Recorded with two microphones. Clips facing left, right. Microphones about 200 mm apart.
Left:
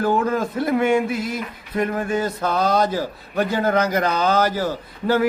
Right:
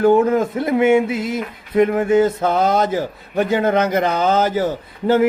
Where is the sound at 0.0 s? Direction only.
20° right (ahead or behind).